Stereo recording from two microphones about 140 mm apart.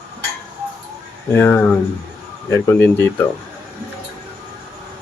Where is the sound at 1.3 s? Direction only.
15° left (ahead or behind).